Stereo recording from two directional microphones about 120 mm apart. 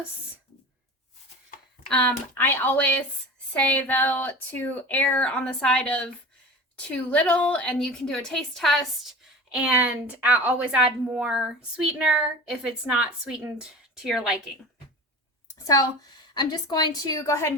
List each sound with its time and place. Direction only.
1.9 s a woman's voice: 10° left (ahead or behind); by 14.5 s 5° right (ahead or behind)
15.5 s a woman's voice: 30° left (ahead or behind)